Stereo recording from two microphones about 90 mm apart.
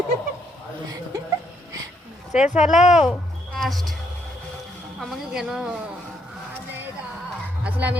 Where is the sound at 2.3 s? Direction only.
5° right (ahead or behind).